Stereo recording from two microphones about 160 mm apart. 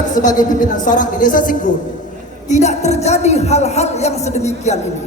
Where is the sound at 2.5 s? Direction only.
45° left (ahead or behind).